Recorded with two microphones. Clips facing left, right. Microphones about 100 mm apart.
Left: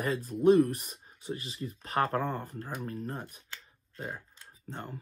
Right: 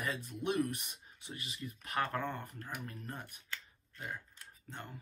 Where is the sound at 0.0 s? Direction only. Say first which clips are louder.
Left 12 dB; 40° left (ahead or behind).